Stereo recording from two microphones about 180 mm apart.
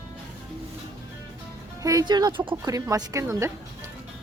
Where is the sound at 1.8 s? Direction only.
20° right (ahead or behind).